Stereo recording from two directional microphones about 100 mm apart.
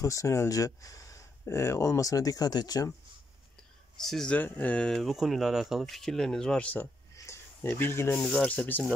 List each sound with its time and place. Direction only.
0.0 s speech: 30° left (ahead or behind)
4.0 s speech: 5° left (ahead or behind)
4.4 s speech: 15° left (ahead or behind)
4.9 s speech: 5° right (ahead or behind); by 6.9 s 15° left (ahead or behind)
7.3 s a sound: 30° left (ahead or behind)
7.8 s speech: 25° left (ahead or behind)
8.4 s speech: 10° left (ahead or behind)